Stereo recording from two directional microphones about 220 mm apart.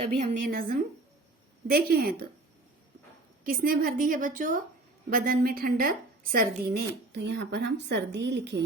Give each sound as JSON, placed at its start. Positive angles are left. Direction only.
{"t": 0.4, "sound": "a woman's voice", "side_deg": -40}
{"t": 3.4, "sound": "a woman's voice", "side_deg": -40}